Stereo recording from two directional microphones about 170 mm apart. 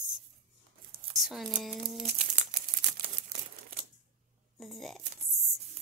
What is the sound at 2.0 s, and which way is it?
Crumpling, 40° right (ahead or behind).